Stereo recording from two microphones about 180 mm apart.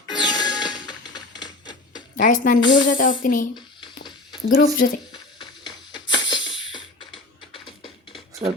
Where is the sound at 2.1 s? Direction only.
45° left (ahead or behind).